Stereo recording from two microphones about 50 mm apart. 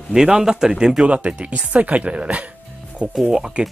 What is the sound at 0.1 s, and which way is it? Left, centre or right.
Speech, centre.